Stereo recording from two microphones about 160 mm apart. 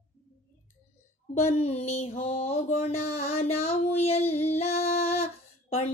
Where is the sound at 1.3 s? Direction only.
45° left (ahead or behind).